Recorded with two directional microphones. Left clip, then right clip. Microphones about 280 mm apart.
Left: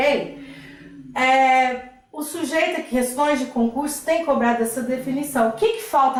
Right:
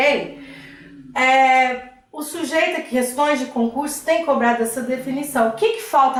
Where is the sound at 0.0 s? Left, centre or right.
Centre.